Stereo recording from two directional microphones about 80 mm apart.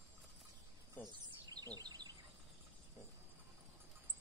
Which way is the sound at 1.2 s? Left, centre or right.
Right.